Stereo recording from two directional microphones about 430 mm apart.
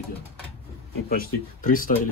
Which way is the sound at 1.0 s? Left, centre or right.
Centre.